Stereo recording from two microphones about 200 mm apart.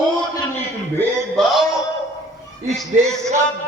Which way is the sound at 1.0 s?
Centre (ahead or behind).